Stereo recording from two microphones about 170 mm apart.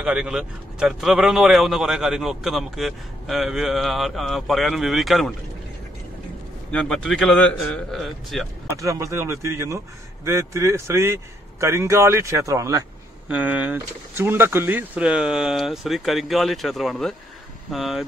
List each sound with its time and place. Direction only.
0.0 s speech: 5° right (ahead or behind)
6.7 s speech: 5° left (ahead or behind)
8.6 s speech: 20° right (ahead or behind)
13.3 s speech: 10° right (ahead or behind)